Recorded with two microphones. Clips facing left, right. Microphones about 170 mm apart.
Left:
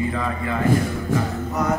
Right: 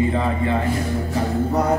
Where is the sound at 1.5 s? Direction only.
30° right (ahead or behind).